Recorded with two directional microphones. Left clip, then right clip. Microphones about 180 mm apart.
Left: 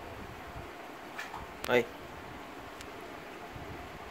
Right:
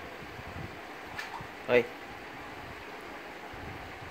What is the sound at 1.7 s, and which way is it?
Speech, 5° right (ahead or behind).